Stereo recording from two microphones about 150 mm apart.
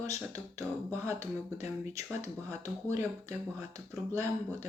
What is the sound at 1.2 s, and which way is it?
Speech, 50° left (ahead or behind).